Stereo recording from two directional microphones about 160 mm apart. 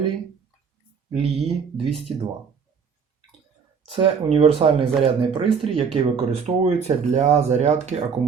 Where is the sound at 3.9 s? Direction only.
35° right (ahead or behind).